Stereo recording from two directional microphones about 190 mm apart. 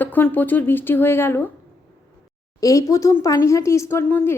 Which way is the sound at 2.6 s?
20° left (ahead or behind).